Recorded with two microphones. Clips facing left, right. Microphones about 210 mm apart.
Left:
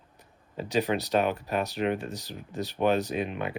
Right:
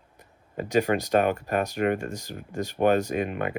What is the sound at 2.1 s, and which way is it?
Speech, 10° right (ahead or behind).